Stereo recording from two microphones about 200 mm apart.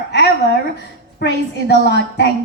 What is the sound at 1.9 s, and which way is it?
Speech, 55° left (ahead or behind).